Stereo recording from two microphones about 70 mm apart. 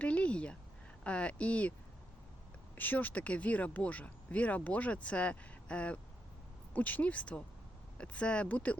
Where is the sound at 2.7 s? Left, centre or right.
Left.